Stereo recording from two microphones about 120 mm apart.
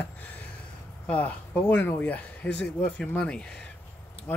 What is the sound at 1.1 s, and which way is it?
Speech, 15° left (ahead or behind).